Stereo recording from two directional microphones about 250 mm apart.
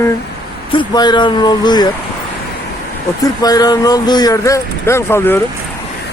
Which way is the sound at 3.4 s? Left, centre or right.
Centre.